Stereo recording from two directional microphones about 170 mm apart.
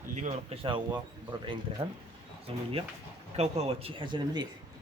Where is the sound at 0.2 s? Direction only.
35° right (ahead or behind).